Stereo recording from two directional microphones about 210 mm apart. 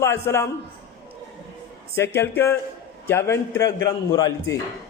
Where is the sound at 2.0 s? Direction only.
10° left (ahead or behind).